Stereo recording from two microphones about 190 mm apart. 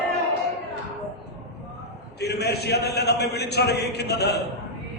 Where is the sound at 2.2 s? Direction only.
60° left (ahead or behind).